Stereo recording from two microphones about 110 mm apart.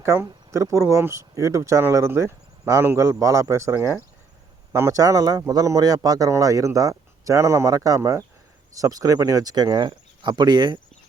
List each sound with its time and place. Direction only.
0.0 s speech: 25° right (ahead or behind); by 10.8 s 45° right (ahead or behind)